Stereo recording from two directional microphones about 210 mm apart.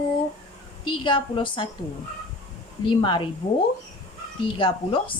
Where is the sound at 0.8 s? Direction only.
25° left (ahead or behind).